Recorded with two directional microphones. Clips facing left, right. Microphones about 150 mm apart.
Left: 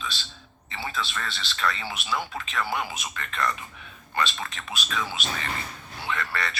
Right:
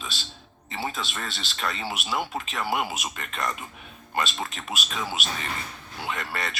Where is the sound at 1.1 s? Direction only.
25° right (ahead or behind).